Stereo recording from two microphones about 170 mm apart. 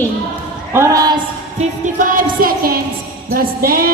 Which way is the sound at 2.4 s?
60° right (ahead or behind).